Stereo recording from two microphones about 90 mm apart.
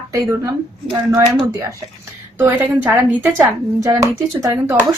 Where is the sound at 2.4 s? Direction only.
25° right (ahead or behind).